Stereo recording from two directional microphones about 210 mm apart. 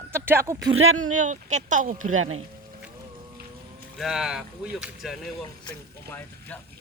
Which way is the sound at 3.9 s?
Centre (ahead or behind).